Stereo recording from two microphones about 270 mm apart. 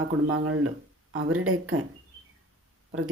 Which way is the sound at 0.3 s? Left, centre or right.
Right.